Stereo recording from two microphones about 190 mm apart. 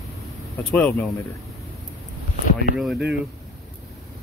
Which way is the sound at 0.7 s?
5° left (ahead or behind).